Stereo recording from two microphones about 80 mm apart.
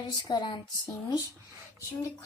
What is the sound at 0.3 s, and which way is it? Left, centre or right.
Speech, left.